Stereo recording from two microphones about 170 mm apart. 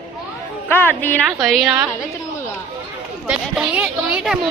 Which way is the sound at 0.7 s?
10° left (ahead or behind).